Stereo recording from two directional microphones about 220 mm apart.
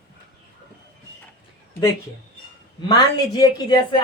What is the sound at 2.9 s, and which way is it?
A woman's voice, 15° left (ahead or behind).